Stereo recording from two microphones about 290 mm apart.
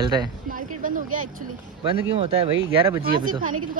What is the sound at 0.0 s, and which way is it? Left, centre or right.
Speech, centre.